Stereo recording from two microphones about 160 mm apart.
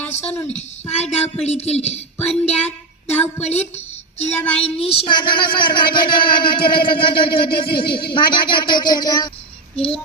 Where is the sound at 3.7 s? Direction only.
45° left (ahead or behind).